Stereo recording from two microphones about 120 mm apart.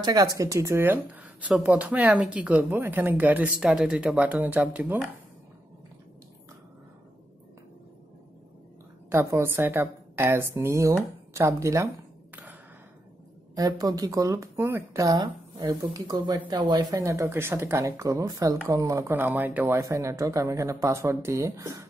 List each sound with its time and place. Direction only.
0.0 s speech: 30° right (ahead or behind); by 5.0 s 15° right (ahead or behind)
9.1 s speech: 25° right (ahead or behind)
13.6 s speech: 30° right (ahead or behind); by 19.8 s 15° right (ahead or behind)
19.8 s speech: 25° right (ahead or behind)